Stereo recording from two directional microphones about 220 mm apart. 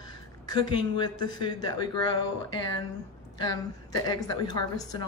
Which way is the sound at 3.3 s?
15° left (ahead or behind).